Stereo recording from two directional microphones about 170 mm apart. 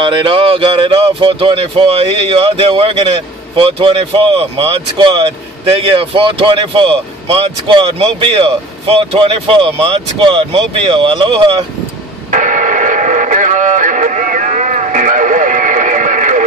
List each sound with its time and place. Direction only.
0.0 s speech: 30° right (ahead or behind)
12.3 s radio: 50° right (ahead or behind)